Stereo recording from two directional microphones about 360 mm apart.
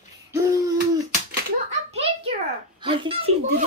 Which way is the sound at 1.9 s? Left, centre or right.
Centre.